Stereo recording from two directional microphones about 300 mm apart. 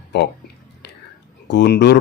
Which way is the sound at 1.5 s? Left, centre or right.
Left.